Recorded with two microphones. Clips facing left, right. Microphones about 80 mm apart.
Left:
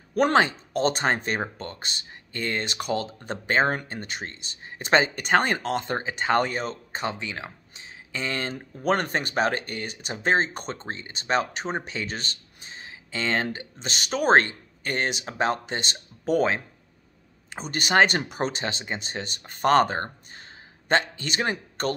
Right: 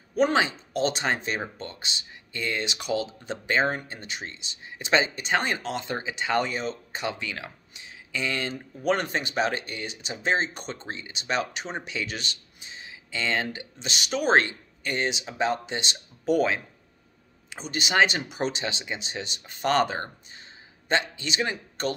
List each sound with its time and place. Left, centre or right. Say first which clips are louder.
0.1 s speech: left 2 dB; left